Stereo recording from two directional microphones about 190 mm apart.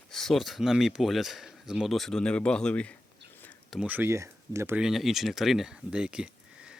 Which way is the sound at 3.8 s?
10° right (ahead or behind).